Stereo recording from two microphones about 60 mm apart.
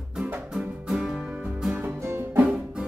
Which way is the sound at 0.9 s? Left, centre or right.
Centre.